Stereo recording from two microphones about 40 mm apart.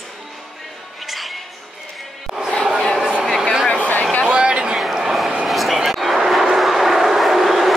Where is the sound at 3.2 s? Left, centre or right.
Centre.